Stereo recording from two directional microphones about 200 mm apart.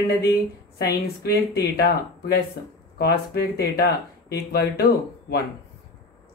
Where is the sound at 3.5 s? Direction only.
50° left (ahead or behind).